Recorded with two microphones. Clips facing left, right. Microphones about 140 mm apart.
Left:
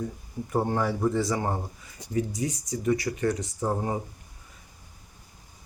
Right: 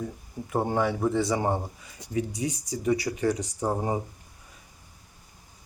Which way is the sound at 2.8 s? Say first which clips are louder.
Right 1 dB; 10° right (ahead or behind).